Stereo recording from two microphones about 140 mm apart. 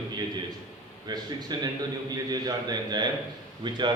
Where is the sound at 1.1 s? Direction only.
30° right (ahead or behind).